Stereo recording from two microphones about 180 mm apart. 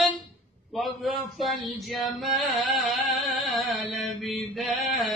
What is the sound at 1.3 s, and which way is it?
Music, centre (ahead or behind).